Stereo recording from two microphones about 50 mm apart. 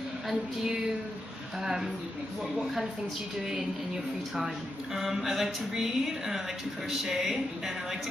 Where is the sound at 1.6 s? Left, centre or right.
Centre.